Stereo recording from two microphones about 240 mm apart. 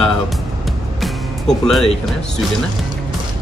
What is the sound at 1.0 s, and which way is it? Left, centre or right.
Music, centre.